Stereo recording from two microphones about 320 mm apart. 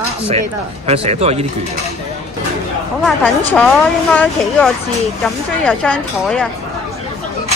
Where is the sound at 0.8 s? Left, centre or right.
Centre.